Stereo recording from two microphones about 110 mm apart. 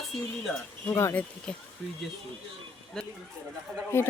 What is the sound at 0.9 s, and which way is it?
Speech, 20° left (ahead or behind).